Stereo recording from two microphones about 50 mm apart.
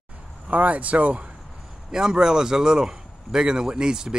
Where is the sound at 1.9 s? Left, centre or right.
Centre.